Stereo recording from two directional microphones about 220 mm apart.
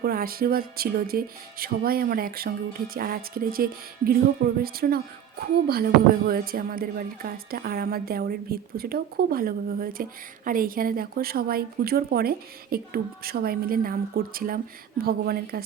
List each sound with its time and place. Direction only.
0.0 s speech: 40° right (ahead or behind)